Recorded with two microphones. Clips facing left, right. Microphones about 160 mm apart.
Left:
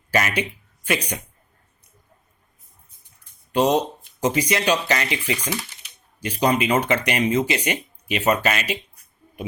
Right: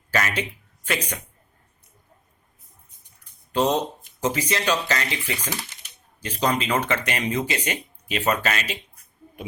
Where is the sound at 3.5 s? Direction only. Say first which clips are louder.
Left 3 dB; 15° left (ahead or behind).